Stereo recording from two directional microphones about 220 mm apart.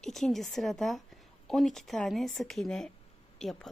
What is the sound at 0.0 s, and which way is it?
A woman's voice, centre (ahead or behind).